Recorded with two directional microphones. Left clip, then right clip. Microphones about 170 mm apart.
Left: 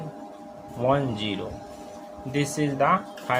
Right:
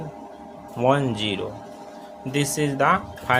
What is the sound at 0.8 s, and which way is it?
A man's voice, 35° right (ahead or behind).